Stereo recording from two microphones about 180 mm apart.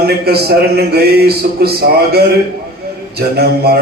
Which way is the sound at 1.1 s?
60° right (ahead or behind).